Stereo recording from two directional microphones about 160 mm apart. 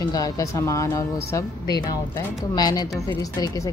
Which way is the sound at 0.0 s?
20° left (ahead or behind).